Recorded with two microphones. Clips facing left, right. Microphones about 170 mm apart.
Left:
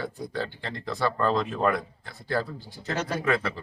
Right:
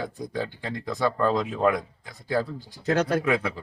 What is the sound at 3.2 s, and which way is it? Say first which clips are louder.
Speech: right 1 dB; 15° right (ahead or behind).